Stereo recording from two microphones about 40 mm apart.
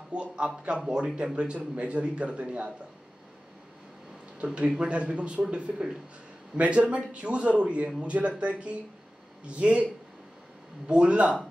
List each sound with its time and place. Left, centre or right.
0.1 s a man's voice: right
4.4 s a man's voice: right
4.8 s a man's voice: right
10.9 s speech: right